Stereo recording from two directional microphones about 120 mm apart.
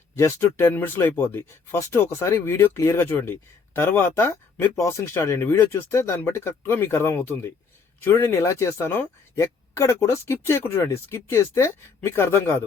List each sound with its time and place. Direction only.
0.2 s speech: 20° left (ahead or behind)